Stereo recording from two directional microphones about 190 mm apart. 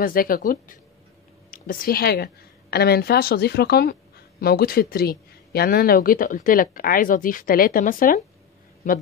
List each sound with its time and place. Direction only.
0.0 s a woman's voice: 50° left (ahead or behind)